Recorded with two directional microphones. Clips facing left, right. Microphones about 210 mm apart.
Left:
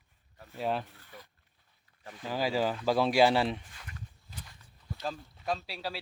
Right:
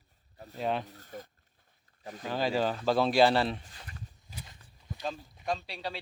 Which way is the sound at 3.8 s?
30° right (ahead or behind).